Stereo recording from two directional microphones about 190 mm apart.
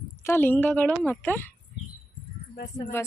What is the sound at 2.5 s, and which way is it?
Speech, 50° left (ahead or behind).